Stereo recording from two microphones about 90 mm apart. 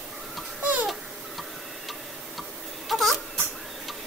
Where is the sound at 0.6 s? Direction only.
15° right (ahead or behind).